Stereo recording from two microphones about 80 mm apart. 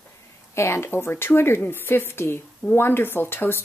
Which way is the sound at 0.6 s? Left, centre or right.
Left.